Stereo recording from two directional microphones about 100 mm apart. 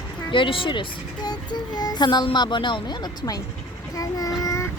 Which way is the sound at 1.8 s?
45° left (ahead or behind).